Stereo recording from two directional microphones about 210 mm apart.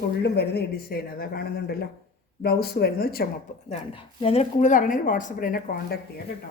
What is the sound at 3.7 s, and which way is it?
Speech, 30° left (ahead or behind).